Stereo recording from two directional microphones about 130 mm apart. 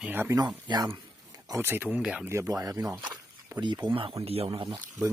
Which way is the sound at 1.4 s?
20° right (ahead or behind).